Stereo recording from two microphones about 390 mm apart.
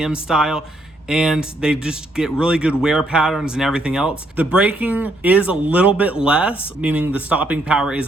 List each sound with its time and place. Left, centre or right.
0.0 s speech: centre